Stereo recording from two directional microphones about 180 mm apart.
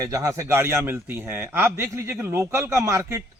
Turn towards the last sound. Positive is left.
turn(degrees=-15)  # may be behind; listen again after turning